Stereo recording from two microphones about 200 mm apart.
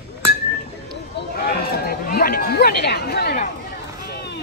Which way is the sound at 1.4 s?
55° left (ahead or behind).